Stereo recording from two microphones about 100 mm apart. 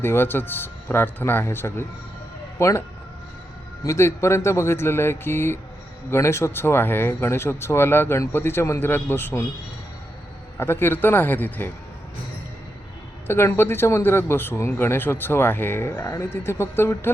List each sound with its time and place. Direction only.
0.0 s a man's voice: 20° left (ahead or behind)
3.8 s a man's voice: 30° left (ahead or behind)
10.6 s a man's voice: 20° left (ahead or behind)
13.2 s a man's voice: 25° left (ahead or behind)